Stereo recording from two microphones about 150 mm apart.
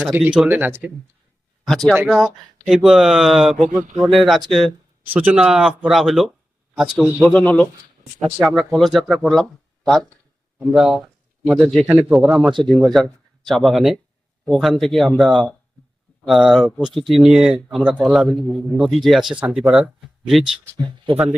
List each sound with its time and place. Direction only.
0.0 s speech: 10° right (ahead or behind)
1.6 s speech: centre (ahead or behind)
5.0 s speech: 10° right (ahead or behind)
7.3 s speech: 10° left (ahead or behind)
10.6 s speech: 5° right (ahead or behind)
12.5 s speech: 30° right (ahead or behind)
12.7 s speech: 5° left (ahead or behind)
20.4 s speech: 30° right (ahead or behind)